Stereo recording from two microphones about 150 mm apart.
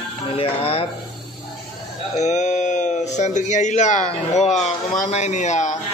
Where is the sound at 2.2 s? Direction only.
50° left (ahead or behind).